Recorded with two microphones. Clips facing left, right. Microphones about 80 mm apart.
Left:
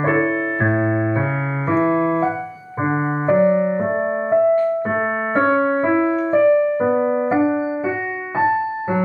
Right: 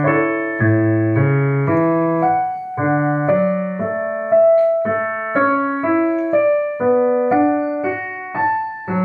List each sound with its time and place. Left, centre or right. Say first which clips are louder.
0.0 s music: right 2 dB; centre
0.7 s keyboard: right 3 dB; centre
1.2 s keyboard: right 5 dB; centre
1.9 s keyboard: right 2 dB; centre
2.1 s keyboard: right 5 dB; centre
3.3 s keyboard: left 2 dB; centre
4.3 s piano: right 5 dB; centre
5.8 s music: right 1 dB; centre
6.1 s music: left 1 dB; centre
6.9 s music: right 3 dB; centre
8.4 s music: left 1 dB; centre